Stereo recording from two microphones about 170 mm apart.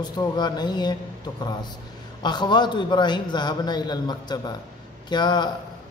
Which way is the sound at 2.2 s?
25° left (ahead or behind).